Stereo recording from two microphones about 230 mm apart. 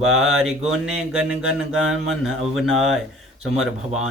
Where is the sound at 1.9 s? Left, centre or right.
Right.